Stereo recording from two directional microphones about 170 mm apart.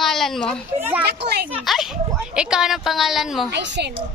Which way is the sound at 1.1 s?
75° right (ahead or behind).